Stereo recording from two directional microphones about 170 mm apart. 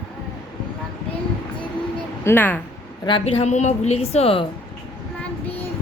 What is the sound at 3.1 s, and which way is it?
A woman's voice, 35° left (ahead or behind).